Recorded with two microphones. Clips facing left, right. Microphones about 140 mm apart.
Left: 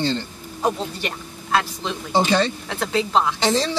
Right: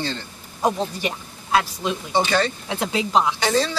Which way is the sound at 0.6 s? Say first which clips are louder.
Right 1 dB; 15° right (ahead or behind).